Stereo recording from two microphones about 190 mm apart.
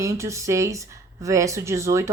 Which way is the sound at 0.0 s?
15° right (ahead or behind).